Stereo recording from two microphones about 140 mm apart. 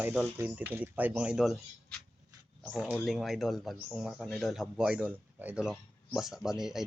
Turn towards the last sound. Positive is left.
turn(degrees=-5)  # may be behind; listen again after turning